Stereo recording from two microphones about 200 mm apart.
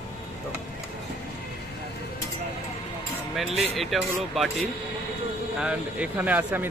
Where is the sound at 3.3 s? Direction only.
Centre (ahead or behind).